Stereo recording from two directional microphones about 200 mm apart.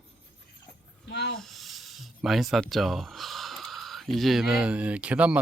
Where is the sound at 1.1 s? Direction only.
55° left (ahead or behind).